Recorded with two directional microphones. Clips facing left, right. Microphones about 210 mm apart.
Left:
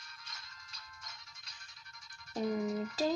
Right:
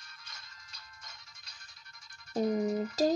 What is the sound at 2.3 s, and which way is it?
Music, 40° right (ahead or behind).